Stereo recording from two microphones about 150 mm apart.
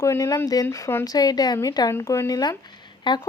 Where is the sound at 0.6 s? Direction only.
15° left (ahead or behind); by 3.2 s 30° left (ahead or behind).